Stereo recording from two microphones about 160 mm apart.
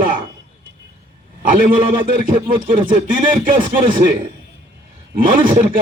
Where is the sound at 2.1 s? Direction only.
60° right (ahead or behind).